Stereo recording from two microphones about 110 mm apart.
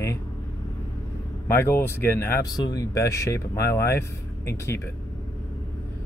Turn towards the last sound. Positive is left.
turn(degrees=25)  # may be behind; listen again after turning